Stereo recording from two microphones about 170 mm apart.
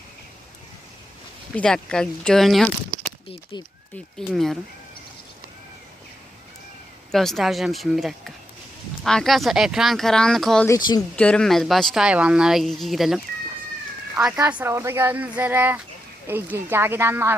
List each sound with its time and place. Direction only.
1.5 s speech: 5° left (ahead or behind)
2.9 s a sound: 30° left (ahead or behind)
4.3 s speech: centre (ahead or behind)
7.1 s speech: centre (ahead or behind)
14.6 s speech: 15° right (ahead or behind)